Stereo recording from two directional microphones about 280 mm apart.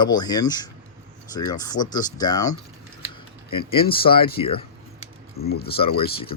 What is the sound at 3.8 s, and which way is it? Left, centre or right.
Speech, centre.